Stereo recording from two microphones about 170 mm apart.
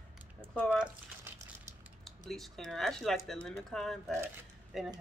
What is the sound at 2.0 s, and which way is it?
Speech, centre (ahead or behind).